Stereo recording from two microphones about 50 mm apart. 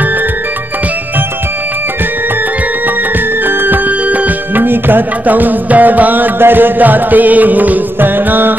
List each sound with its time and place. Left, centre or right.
3.4 s music: right